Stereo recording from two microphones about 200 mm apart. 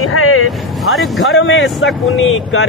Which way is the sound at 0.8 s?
Centre (ahead or behind).